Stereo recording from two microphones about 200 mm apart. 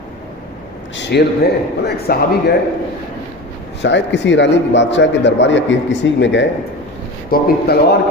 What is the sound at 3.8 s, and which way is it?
A man's voice, 60° left (ahead or behind).